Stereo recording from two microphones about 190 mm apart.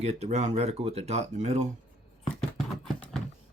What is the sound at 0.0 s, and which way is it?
Speech, 35° right (ahead or behind).